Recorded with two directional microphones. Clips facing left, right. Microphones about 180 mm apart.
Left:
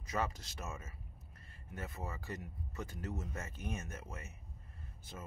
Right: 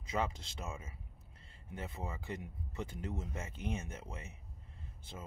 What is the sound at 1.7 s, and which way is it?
Speech, 25° right (ahead or behind).